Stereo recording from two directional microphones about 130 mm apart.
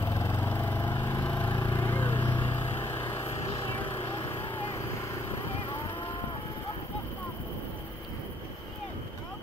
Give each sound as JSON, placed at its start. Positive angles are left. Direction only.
{"t": 0.0, "sound": "vehicle", "side_deg": 20}
{"t": 1.6, "sound": "a sound", "side_deg": 15}
{"t": 2.4, "sound": "vehicle", "side_deg": 20}
{"t": 4.0, "sound": "vehicle", "side_deg": 40}